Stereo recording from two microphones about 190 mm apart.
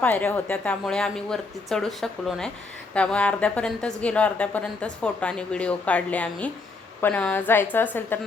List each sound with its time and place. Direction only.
0.0 s a woman's voice: 10° left (ahead or behind)